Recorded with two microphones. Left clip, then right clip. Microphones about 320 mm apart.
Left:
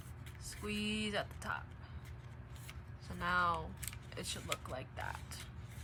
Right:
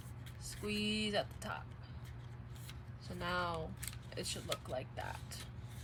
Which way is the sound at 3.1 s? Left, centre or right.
Centre.